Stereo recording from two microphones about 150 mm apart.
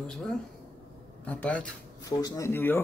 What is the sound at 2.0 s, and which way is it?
Speech, 20° left (ahead or behind).